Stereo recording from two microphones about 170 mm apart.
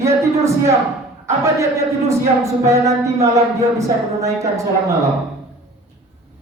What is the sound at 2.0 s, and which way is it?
Music, 15° right (ahead or behind).